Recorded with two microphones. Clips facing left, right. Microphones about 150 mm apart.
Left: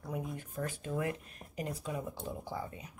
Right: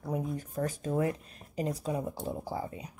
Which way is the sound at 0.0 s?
35° right (ahead or behind).